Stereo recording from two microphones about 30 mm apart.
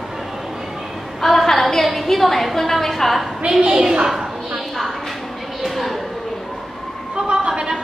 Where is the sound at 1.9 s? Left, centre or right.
Centre.